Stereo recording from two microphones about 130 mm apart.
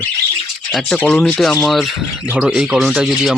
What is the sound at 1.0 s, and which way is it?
Speech, 15° left (ahead or behind).